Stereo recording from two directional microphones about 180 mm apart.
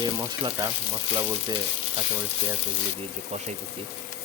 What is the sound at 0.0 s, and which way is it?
Speech, 25° right (ahead or behind).